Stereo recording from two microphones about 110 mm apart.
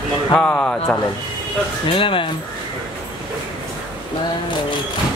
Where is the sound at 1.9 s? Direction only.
50° left (ahead or behind).